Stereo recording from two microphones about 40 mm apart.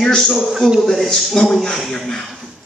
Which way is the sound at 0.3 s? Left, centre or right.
Centre.